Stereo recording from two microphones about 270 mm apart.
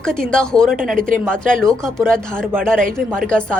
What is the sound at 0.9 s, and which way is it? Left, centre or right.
Speech, right.